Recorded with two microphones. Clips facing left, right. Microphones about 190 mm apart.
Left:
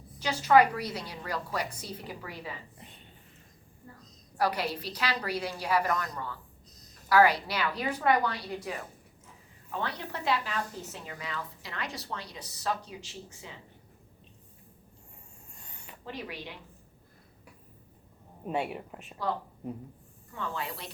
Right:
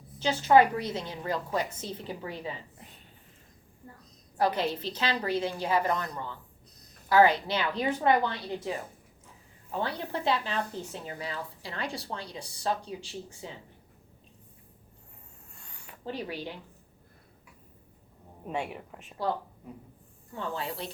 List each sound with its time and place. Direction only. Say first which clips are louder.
0.2 s a woman's voice: right 1 dB; 25° right (ahead or behind)
4.4 s a woman's voice: right 2 dB; 25° right (ahead or behind)
15.5 s a sound: left 1 dB; 20° left (ahead or behind)
16.0 s speech: right 4 dB; 30° right (ahead or behind)
18.4 s speech: left 2 dB; 5° left (ahead or behind)
20.3 s a woman's voice: right 2 dB; 30° right (ahead or behind)